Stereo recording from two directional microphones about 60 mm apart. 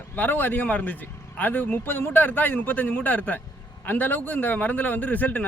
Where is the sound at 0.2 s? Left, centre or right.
Left.